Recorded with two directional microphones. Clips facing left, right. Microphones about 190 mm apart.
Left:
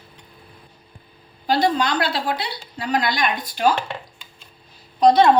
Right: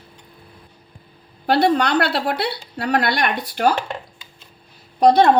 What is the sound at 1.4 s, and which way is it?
A woman's voice, 65° right (ahead or behind).